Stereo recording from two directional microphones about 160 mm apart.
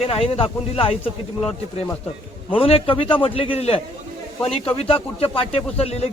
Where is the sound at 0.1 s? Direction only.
35° left (ahead or behind).